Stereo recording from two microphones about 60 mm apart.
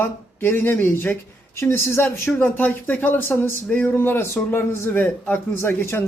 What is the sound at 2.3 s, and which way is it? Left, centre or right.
A man's voice, left.